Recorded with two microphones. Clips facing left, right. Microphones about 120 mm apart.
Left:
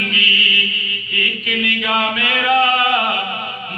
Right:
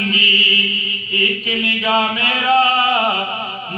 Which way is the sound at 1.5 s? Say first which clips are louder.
Left 1 dB; 30° right (ahead or behind).